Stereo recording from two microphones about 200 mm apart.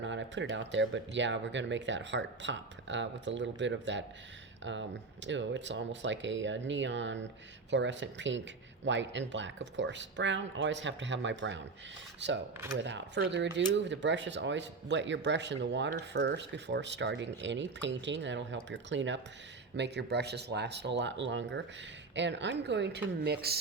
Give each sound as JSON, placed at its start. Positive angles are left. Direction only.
{"t": 0.0, "sound": "speech", "side_deg": -65}
{"t": 12.7, "sound": "speech", "side_deg": -65}